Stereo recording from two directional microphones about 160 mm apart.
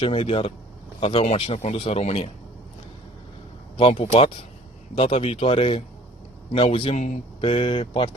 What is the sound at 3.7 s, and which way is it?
Speech, 40° left (ahead or behind).